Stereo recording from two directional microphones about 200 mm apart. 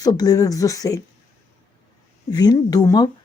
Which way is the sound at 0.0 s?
20° left (ahead or behind).